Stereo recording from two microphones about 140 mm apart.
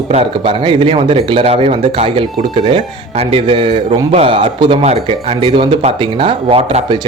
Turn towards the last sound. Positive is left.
turn(degrees=-40)  # may be behind; listen again after turning